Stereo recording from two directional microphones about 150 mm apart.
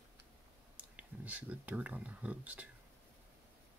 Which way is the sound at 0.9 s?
10° right (ahead or behind).